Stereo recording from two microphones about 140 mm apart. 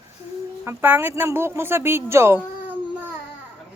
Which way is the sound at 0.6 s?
15° right (ahead or behind).